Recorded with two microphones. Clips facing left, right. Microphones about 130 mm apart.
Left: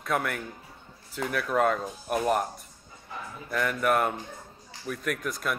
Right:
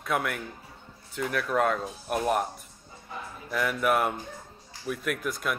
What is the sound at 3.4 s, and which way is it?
Speech, 5° right (ahead or behind).